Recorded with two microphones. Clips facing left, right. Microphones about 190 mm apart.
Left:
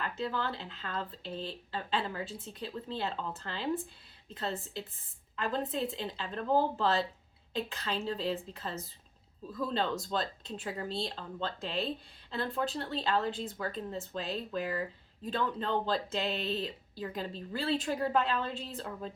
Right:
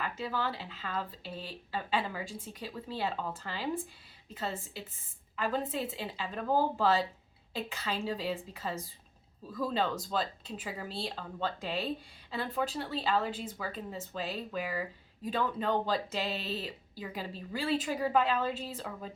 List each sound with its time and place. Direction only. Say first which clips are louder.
0.0 s speech: even; 5° right (ahead or behind)
10.1 s speech: even; 5° right (ahead or behind)